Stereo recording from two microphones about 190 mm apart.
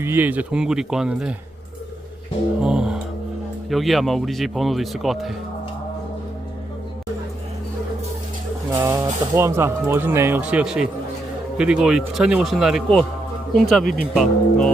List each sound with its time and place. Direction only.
0.0 s speech: 10° right (ahead or behind)
2.6 s speech: 5° right (ahead or behind)
8.7 s speech: 15° right (ahead or behind); by 14.7 s centre (ahead or behind)